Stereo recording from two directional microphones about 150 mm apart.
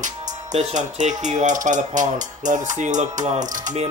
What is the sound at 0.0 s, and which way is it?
Speech, 50° right (ahead or behind).